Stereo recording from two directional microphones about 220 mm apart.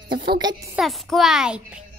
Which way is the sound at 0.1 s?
45° right (ahead or behind).